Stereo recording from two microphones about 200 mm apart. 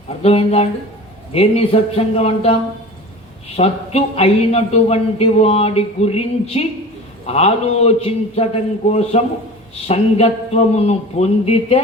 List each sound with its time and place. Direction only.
0.2 s a man's voice: 30° left (ahead or behind)